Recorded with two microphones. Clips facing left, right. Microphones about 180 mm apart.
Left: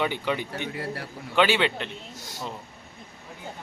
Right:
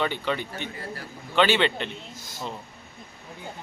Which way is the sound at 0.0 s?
10° left (ahead or behind).